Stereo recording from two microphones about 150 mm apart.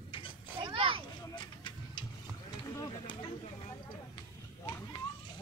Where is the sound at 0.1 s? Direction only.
35° left (ahead or behind).